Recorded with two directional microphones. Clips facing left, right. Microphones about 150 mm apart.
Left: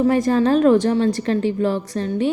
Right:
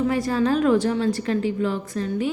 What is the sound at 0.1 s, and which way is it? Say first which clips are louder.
A woman's voice: left 5 dB; 45° left (ahead or behind).